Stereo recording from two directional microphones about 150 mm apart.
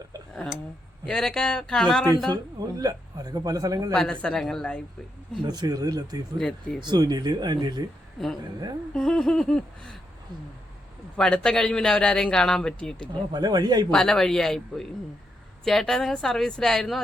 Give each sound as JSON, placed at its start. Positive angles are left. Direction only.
{"t": 1.0, "sound": "a man's voice", "side_deg": 5}
{"t": 2.3, "sound": "speech", "side_deg": -25}
{"t": 3.9, "sound": "a man's voice", "side_deg": 5}
{"t": 5.5, "sound": "speech", "side_deg": -25}
{"t": 6.4, "sound": "a man's voice", "side_deg": 5}
{"t": 6.8, "sound": "speech", "side_deg": -25}
{"t": 8.9, "sound": "a man's voice", "side_deg": 5}
{"t": 11.2, "sound": "a man's voice", "side_deg": 5}
{"t": 13.3, "sound": "speech", "side_deg": -25}
{"t": 13.9, "sound": "a man's voice", "side_deg": 5}